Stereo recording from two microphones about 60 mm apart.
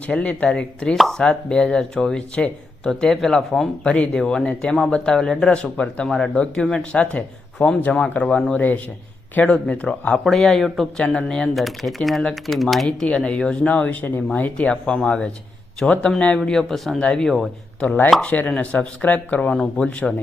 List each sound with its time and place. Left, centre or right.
0.1 s speech: left
10.2 s speech: centre
11.5 s speech: centre
13.1 s speech: centre
13.7 s speech: left; by 17.0 s centre
17.0 s speech: centre
17.2 s speech: centre
17.7 s speech: left